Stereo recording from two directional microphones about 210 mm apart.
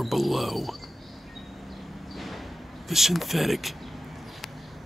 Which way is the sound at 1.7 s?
Centre (ahead or behind).